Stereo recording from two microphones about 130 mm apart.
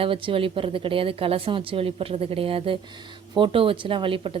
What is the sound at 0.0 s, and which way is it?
A woman's voice, 45° right (ahead or behind).